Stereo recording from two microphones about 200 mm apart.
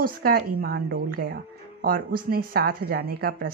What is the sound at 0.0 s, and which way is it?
Speech, 50° right (ahead or behind).